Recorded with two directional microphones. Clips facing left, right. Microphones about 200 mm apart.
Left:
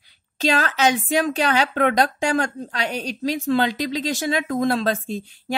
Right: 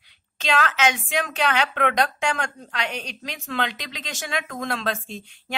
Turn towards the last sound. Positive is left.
turn(degrees=35)  # may be behind; listen again after turning